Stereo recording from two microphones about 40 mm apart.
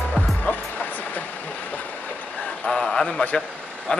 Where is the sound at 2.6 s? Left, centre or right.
Left.